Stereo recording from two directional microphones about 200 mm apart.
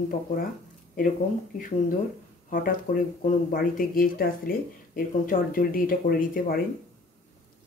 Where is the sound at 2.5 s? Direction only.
45° left (ahead or behind).